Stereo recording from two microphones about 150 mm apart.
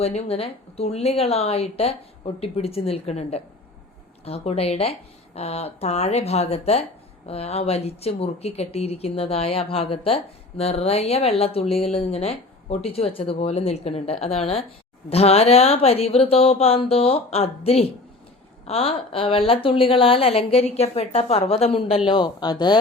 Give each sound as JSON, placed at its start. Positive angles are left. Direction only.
{"t": 0.0, "sound": "speech", "side_deg": 40}